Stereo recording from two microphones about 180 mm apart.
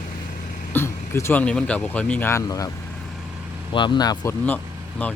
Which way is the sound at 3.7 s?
25° left (ahead or behind).